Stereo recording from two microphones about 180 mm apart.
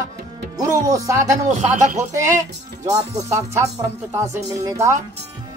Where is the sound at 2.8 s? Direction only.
20° right (ahead or behind).